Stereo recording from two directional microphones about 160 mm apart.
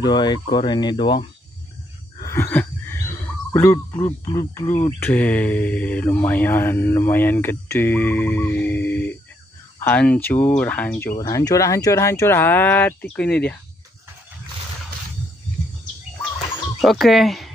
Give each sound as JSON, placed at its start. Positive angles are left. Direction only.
{"t": 0.0, "sound": "speech", "side_deg": 25}
{"t": 2.1, "sound": "a sound", "side_deg": 15}
{"t": 4.2, "sound": "speech", "side_deg": 25}
{"t": 5.0, "sound": "mantra", "side_deg": 10}
{"t": 11.1, "sound": "mantra", "side_deg": 20}
{"t": 16.8, "sound": "speech", "side_deg": 0}